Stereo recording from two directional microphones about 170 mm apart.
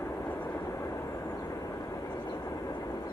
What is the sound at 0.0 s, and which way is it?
Vehicle, 15° left (ahead or behind).